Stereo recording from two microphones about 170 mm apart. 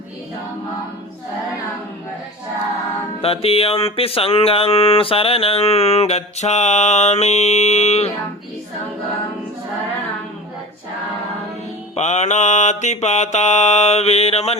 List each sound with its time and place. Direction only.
3.2 s music: 35° left (ahead or behind)
11.9 s music: 40° left (ahead or behind)